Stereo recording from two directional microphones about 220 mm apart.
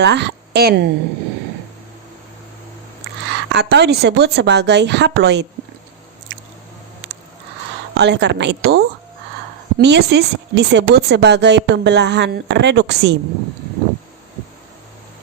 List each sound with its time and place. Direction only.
0.0 s a woman's voice: 50° right (ahead or behind)
3.2 s speech: 50° right (ahead or behind)
7.9 s speech: 50° right (ahead or behind)